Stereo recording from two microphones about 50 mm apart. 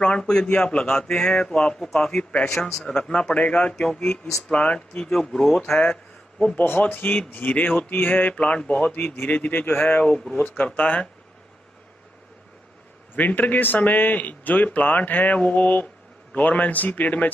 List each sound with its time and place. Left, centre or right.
0.0 s speech: centre
6.9 s speech: left
8.9 s speech: left
9.3 s speech: left
13.1 s speech: left